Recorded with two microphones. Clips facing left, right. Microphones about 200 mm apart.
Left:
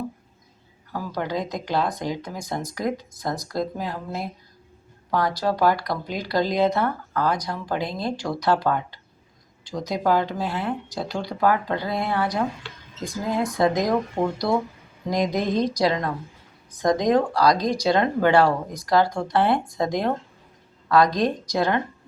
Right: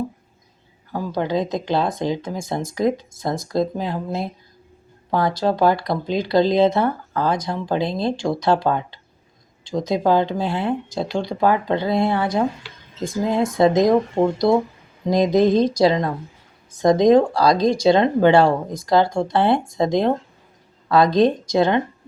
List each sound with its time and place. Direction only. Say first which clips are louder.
0.9 s speech: right 5 dB; 25° right (ahead or behind)
5.4 s speech: right 4 dB; 25° right (ahead or behind)
13.6 s speech: right 7 dB; 25° right (ahead or behind)